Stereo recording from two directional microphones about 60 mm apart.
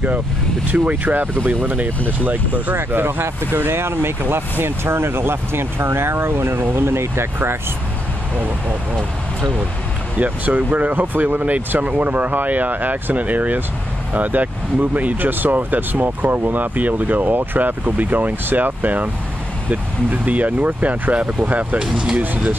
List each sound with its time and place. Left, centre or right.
0.7 s speech: right
10.1 s speech: right